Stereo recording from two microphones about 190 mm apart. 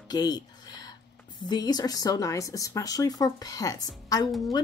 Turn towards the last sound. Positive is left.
turn(degrees=0)  # may be behind; listen again after turning